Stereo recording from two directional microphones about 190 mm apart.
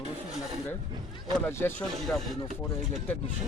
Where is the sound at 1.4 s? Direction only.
10° left (ahead or behind).